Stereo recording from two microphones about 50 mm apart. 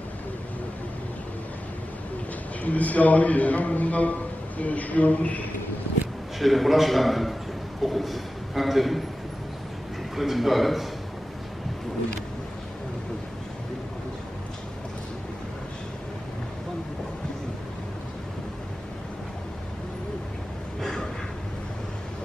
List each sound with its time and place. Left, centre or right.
2.6 s a man's voice: left
6.4 s a man's voice: centre
10.1 s a man's voice: centre